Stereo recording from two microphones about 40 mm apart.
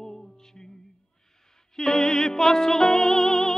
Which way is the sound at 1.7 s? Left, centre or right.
Centre.